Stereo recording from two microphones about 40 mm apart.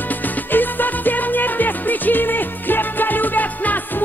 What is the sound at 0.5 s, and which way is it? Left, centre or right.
Music, left.